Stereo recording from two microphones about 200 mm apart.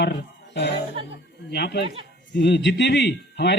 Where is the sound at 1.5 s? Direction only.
55° left (ahead or behind).